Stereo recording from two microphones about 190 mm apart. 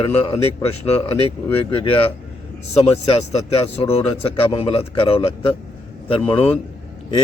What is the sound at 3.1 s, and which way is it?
Speech, 30° left (ahead or behind).